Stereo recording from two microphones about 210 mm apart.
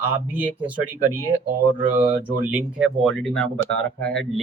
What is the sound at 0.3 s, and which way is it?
Speech, 5° right (ahead or behind).